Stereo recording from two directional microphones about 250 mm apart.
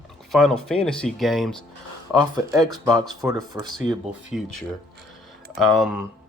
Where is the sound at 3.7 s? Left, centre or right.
Centre.